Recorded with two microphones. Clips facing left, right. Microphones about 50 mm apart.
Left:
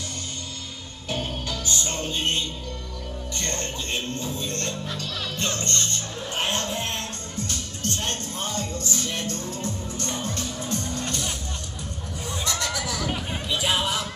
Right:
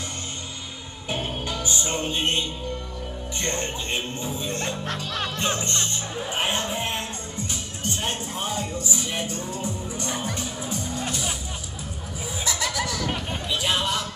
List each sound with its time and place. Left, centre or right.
1.0 s music: centre
3.3 s speech: centre
5.3 s music: centre
12.3 s a sound: centre